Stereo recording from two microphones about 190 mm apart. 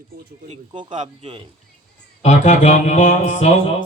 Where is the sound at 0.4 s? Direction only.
30° right (ahead or behind).